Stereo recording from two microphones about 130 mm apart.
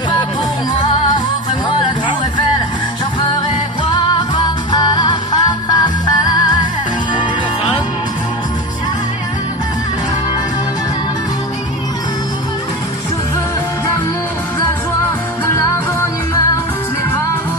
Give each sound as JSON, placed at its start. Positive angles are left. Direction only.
{"t": 3.9, "sound": "music", "side_deg": 35}